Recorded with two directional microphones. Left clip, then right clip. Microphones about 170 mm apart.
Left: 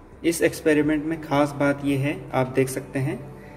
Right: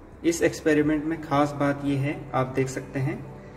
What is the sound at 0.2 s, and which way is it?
A man's voice, 20° left (ahead or behind).